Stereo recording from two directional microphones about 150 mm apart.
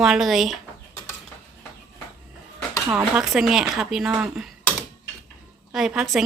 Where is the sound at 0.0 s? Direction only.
Centre (ahead or behind).